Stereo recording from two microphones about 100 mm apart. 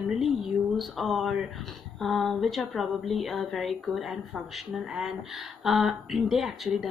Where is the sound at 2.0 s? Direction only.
Centre (ahead or behind).